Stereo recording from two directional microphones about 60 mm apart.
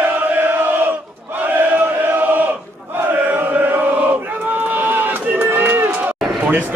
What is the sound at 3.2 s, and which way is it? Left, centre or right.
Chant, right.